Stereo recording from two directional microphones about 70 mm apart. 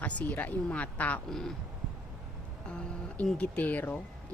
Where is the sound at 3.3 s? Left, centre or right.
Left.